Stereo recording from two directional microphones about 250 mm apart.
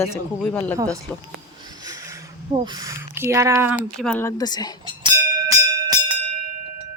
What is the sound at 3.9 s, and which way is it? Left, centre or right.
Speech, centre.